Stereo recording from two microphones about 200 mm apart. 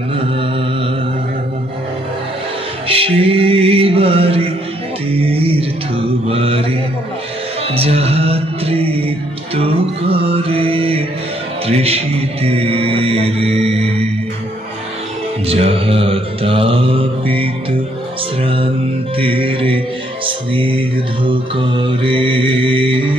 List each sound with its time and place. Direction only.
2.9 s music: 30° right (ahead or behind)
5.1 s mantra: 30° right (ahead or behind)
7.7 s music: 30° right (ahead or behind)
11.6 s mantra: 30° right (ahead or behind)
15.4 s mantra: 30° right (ahead or behind)
18.4 s music: 25° right (ahead or behind)